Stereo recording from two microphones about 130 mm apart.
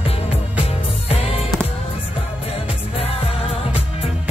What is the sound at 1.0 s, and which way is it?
Music, 50° left (ahead or behind).